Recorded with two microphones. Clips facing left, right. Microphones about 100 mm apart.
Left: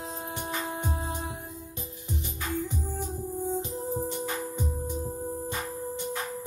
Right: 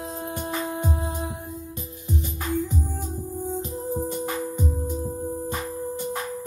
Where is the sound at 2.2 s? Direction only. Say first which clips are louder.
Right 5 dB; 45° right (ahead or behind).